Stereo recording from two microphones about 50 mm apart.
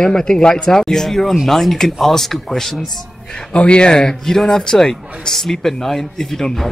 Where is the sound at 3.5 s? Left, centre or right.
Left.